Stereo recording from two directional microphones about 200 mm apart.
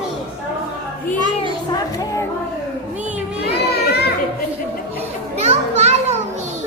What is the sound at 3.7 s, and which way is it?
Children playing, 55° left (ahead or behind).